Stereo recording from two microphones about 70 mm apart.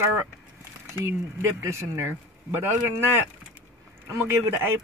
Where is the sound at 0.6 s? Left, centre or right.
Right.